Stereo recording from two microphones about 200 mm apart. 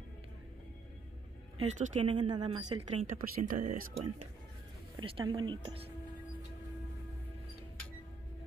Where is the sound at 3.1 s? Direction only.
45° right (ahead or behind).